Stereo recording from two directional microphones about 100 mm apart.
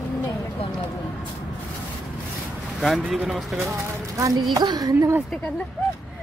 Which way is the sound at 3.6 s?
30° right (ahead or behind).